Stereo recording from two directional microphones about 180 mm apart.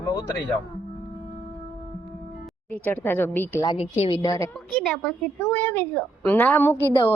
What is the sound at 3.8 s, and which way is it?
Speech, 35° left (ahead or behind).